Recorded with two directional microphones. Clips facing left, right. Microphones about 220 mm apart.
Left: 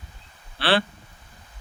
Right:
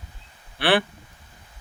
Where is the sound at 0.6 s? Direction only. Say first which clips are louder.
Right 2 dB; 15° right (ahead or behind).